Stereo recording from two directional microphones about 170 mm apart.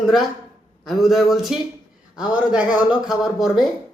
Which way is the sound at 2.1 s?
25° left (ahead or behind).